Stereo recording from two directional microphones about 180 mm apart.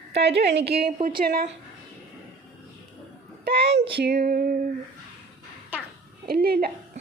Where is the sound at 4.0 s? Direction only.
60° right (ahead or behind).